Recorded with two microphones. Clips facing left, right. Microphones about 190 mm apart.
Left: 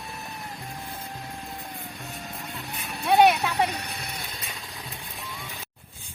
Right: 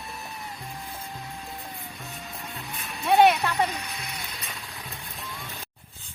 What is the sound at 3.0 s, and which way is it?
Vehicle, centre (ahead or behind).